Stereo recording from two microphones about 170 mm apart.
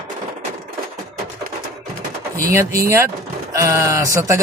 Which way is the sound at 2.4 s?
15° right (ahead or behind).